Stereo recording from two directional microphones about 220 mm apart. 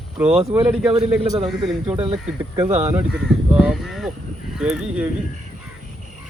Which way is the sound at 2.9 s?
5° right (ahead or behind).